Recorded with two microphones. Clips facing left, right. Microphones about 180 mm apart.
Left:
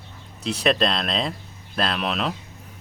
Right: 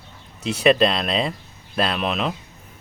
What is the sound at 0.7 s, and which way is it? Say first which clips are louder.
Speech: right 5 dB; 5° right (ahead or behind).